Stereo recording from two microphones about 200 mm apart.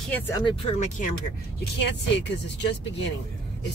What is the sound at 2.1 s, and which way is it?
Speech, 60° left (ahead or behind).